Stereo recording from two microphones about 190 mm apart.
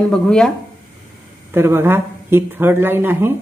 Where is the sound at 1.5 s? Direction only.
10° right (ahead or behind).